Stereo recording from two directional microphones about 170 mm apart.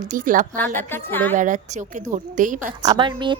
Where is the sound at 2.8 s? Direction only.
30° right (ahead or behind).